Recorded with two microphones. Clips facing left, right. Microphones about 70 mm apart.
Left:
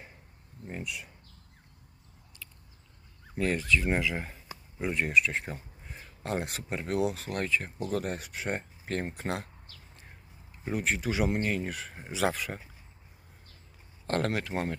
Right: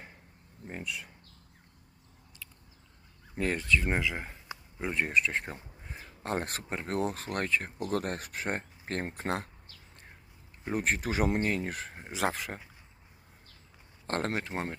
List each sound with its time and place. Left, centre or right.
0.7 s speech: right
3.3 s speech: right
3.9 s speech: centre
4.9 s speech: right
10.7 s speech: right
14.1 s speech: right